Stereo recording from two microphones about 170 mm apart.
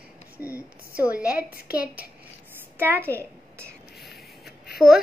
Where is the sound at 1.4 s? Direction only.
65° left (ahead or behind).